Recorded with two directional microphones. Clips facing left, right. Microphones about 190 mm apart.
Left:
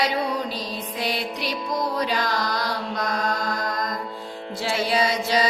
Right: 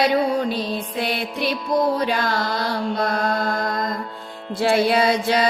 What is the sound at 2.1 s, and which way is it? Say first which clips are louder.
Carnatic music: right 3 dB; 50° right (ahead or behind).